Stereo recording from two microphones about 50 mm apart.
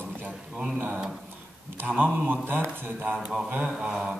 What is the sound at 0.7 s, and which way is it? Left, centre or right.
Speech, right.